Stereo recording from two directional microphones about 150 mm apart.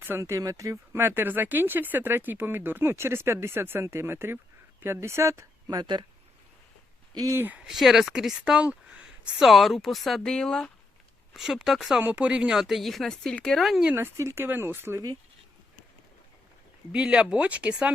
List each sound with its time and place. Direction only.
0.0 s speech: 15° right (ahead or behind)
7.1 s speech: 25° right (ahead or behind); by 13.9 s centre (ahead or behind)
13.9 s speech: 15° right (ahead or behind)
16.9 s speech: 10° right (ahead or behind)